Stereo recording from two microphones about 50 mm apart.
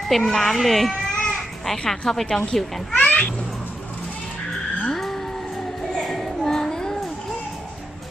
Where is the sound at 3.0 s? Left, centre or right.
Left.